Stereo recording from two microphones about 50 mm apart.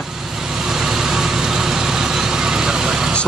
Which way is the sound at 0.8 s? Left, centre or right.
Centre.